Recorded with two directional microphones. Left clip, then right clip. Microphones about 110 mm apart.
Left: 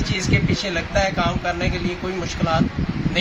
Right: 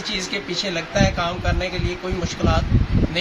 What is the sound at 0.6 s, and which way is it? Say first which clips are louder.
Speech: right 1 dB; 10° right (ahead or behind).